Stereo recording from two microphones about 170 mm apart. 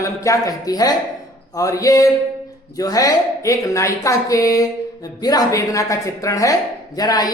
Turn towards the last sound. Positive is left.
turn(degrees=20)  # may be behind; listen again after turning